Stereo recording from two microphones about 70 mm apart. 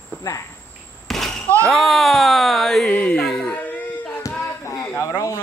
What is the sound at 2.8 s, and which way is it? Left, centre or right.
Music, centre.